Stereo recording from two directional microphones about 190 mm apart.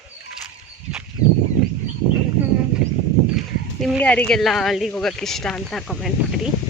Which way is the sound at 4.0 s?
10° left (ahead or behind).